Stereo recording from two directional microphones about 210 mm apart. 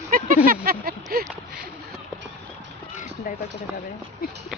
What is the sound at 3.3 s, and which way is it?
Speech, 40° left (ahead or behind).